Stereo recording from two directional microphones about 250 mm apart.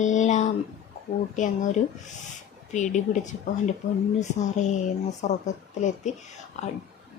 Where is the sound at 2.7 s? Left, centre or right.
Left.